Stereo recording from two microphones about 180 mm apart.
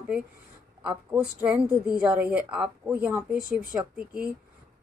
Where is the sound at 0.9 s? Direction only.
5° right (ahead or behind).